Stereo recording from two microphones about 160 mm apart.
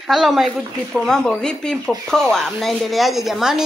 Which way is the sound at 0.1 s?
Centre (ahead or behind).